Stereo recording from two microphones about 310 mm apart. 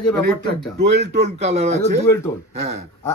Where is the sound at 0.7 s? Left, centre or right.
Right.